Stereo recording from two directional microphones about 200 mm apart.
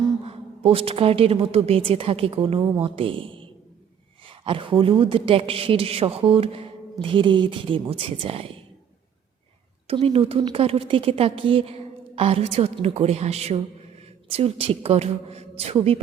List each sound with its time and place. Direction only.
0.3 s a woman's voice: 30° right (ahead or behind)
9.8 s a woman's voice: 30° right (ahead or behind)